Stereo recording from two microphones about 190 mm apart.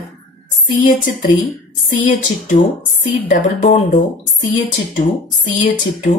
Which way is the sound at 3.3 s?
45° left (ahead or behind).